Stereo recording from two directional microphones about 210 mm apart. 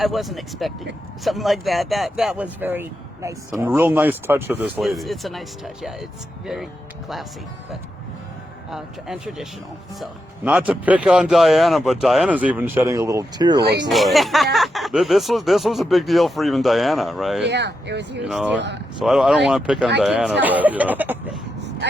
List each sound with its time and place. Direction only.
0.0 s speech: centre (ahead or behind)
8.7 s speech: 5° right (ahead or behind); by 13.6 s 20° right (ahead or behind)
13.8 s speech: centre (ahead or behind)
17.4 s speech: 55° right (ahead or behind)
18.2 s speech: 5° right (ahead or behind)
18.5 s speech: 55° right (ahead or behind)
19.0 s speech: centre (ahead or behind)